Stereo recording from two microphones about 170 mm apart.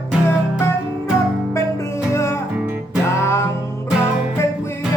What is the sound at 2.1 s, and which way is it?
Music, 15° left (ahead or behind).